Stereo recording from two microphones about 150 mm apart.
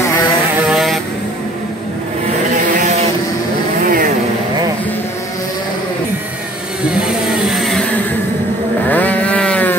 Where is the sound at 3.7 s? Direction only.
65° right (ahead or behind).